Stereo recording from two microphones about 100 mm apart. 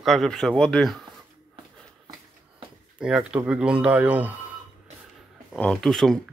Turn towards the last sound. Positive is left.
turn(degrees=5)  # may be behind; listen again after turning